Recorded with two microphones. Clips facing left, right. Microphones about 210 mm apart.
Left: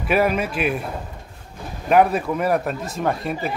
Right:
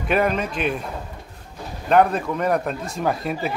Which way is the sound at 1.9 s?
5° left (ahead or behind).